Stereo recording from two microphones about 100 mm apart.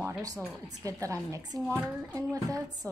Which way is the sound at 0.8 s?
35° right (ahead or behind).